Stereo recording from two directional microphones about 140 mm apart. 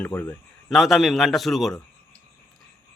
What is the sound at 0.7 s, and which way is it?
Speech, centre (ahead or behind).